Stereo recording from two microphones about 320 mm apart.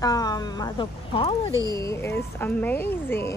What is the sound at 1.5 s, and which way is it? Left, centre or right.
Speech, centre.